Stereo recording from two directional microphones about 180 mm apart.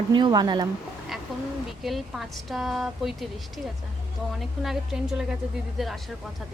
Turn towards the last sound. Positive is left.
turn(degrees=-5)  # may be behind; listen again after turning